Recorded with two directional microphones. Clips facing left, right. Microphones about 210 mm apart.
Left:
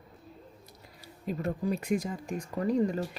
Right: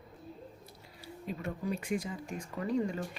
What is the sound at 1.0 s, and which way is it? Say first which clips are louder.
Speech: left 5 dB; 40° left (ahead or behind).